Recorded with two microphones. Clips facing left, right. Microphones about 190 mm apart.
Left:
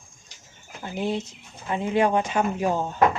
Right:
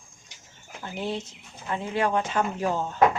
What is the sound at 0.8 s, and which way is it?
Speech, 15° left (ahead or behind).